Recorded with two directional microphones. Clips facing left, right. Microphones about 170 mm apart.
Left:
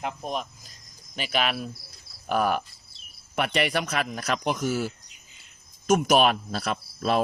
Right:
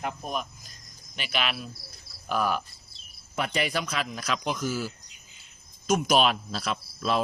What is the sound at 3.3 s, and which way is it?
Speech, 70° left (ahead or behind).